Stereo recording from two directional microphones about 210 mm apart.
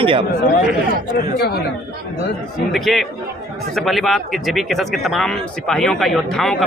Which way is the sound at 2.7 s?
Centre (ahead or behind).